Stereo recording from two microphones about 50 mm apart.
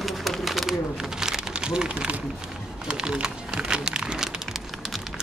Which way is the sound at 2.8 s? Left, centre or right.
Centre.